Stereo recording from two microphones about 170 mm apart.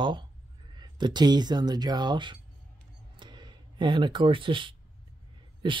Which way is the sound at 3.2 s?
25° right (ahead or behind).